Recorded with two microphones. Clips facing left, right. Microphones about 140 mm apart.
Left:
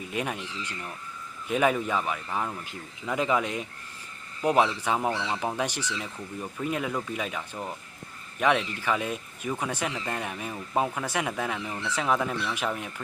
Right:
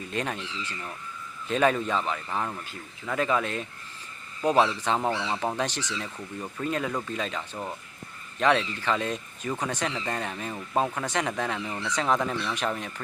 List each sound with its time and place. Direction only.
0.1 s speech: 10° left (ahead or behind)
2.6 s speech: 15° left (ahead or behind)